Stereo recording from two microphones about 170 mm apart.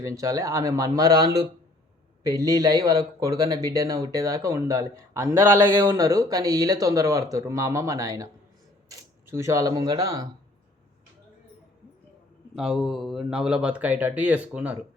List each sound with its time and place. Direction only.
0.0 s speech: 20° right (ahead or behind)
12.5 s speech: centre (ahead or behind)